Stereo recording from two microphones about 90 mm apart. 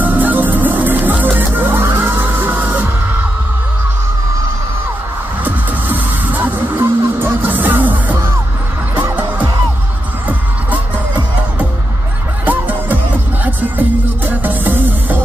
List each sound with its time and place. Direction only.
0.0 s music: 20° right (ahead or behind)
5.4 s music: 20° right (ahead or behind)
12.4 s music: 20° right (ahead or behind)